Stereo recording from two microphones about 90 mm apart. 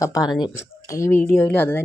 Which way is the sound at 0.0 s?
40° left (ahead or behind).